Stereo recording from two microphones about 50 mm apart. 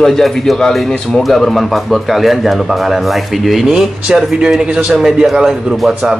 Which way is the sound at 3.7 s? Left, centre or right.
Centre.